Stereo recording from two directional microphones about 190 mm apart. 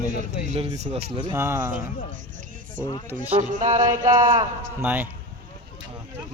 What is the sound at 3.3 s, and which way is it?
Music, 45° right (ahead or behind).